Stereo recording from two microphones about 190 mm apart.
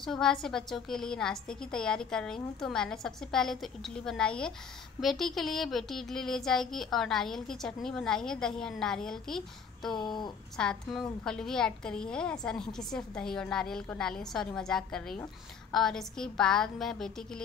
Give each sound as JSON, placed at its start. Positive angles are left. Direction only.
{"t": 0.0, "sound": "a woman's voice", "side_deg": 5}
{"t": 9.8, "sound": "speech", "side_deg": 25}
{"t": 10.6, "sound": "a woman's voice", "side_deg": 5}